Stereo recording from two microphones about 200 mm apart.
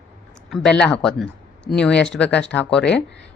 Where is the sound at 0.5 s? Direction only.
5° left (ahead or behind).